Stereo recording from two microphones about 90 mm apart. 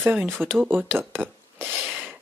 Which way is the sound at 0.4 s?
20° right (ahead or behind).